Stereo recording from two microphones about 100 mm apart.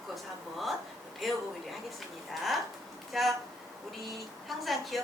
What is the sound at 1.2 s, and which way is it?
Speech, centre (ahead or behind).